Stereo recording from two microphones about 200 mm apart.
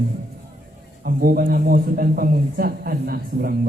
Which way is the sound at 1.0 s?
45° right (ahead or behind).